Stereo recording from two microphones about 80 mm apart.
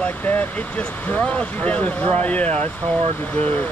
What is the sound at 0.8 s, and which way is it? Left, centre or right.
Speech, centre.